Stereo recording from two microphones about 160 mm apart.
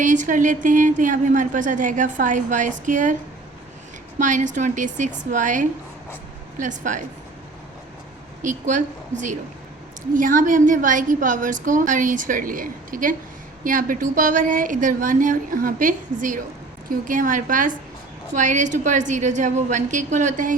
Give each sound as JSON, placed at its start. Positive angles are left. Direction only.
{"t": 0.0, "sound": "a woman's voice", "side_deg": -50}
{"t": 4.2, "sound": "a woman's voice", "side_deg": -50}
{"t": 8.4, "sound": "a woman's voice", "side_deg": -50}